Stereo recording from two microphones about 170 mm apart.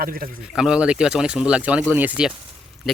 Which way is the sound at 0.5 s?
5° right (ahead or behind).